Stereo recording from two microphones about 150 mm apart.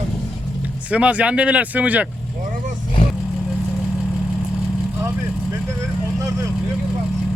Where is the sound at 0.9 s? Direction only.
10° right (ahead or behind).